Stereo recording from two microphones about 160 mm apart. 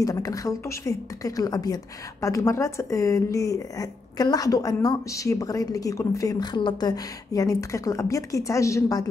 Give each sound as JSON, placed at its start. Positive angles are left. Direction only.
{"t": 0.0, "sound": "speech", "side_deg": 20}